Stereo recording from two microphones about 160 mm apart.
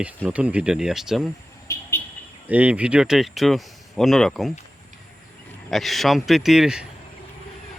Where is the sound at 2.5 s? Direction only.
10° right (ahead or behind).